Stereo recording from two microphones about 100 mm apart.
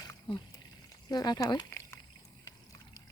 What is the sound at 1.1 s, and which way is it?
Speech, 45° left (ahead or behind).